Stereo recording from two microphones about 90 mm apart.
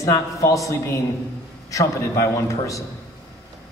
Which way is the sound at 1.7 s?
35° left (ahead or behind).